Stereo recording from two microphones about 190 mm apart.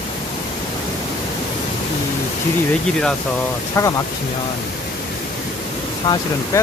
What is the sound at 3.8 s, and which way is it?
Speech, 15° left (ahead or behind).